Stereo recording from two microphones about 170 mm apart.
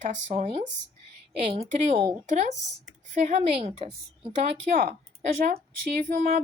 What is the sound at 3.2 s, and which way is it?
Speech, 40° right (ahead or behind).